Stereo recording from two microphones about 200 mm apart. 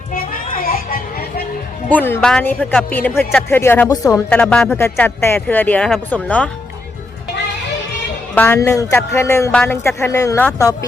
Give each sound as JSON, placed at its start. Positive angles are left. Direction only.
{"t": 0.1, "sound": "music", "side_deg": 45}
{"t": 1.9, "sound": "speech", "side_deg": 10}
{"t": 4.3, "sound": "speech", "side_deg": 5}
{"t": 8.4, "sound": "speech", "side_deg": 10}